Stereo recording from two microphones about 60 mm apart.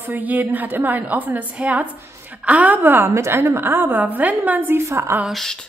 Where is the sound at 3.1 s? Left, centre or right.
Right.